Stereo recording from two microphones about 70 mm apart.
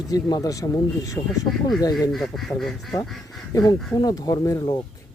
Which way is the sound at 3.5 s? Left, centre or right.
Left.